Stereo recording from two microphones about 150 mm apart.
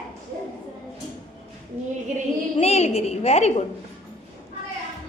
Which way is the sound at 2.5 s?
45° left (ahead or behind).